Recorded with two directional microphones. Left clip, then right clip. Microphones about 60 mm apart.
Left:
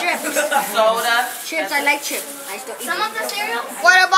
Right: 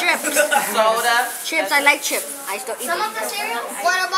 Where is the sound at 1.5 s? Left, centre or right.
Right.